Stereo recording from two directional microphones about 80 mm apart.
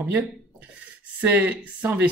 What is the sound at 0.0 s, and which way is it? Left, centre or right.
Speech, right.